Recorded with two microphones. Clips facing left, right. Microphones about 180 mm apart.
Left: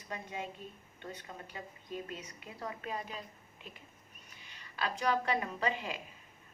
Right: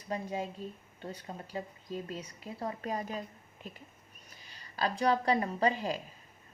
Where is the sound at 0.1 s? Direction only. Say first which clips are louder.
Right 6 dB; 35° right (ahead or behind).